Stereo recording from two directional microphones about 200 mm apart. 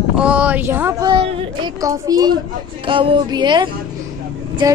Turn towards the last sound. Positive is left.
turn(degrees=-20)  # may be behind; listen again after turning